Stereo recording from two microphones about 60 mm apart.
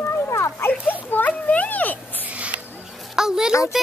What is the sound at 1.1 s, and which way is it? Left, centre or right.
Speech, left.